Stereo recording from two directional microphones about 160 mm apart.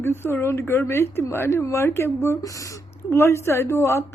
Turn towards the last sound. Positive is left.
turn(degrees=15)  # may be behind; listen again after turning